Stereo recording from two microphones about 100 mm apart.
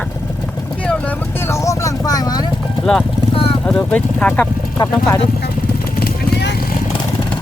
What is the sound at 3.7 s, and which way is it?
Speech, 10° left (ahead or behind).